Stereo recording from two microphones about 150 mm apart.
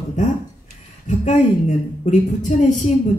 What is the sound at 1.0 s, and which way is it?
A woman's voice, 55° left (ahead or behind).